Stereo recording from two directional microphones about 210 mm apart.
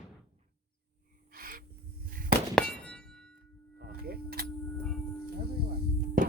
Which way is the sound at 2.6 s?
5° left (ahead or behind).